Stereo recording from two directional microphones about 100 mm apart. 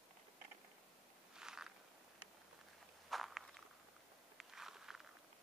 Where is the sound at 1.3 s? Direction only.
5° right (ahead or behind).